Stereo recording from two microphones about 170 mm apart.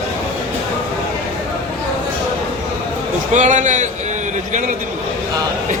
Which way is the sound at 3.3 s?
45° right (ahead or behind).